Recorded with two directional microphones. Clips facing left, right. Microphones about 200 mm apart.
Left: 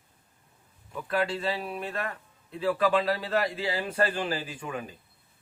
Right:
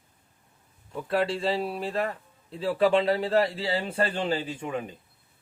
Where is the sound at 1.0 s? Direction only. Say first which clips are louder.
Right 3 dB; 30° right (ahead or behind).